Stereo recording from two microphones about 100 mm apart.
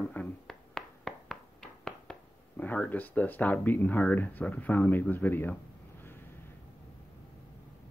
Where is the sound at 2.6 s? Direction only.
15° left (ahead or behind).